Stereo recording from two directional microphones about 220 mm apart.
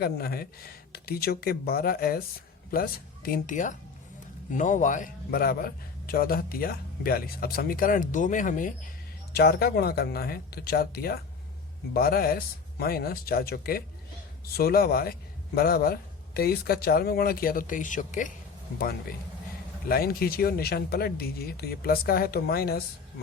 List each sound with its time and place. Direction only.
0.0 s a man's voice: 45° left (ahead or behind)
19.9 s speech: 45° left (ahead or behind)